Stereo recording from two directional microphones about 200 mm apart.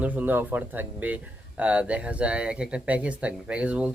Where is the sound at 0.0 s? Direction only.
10° right (ahead or behind).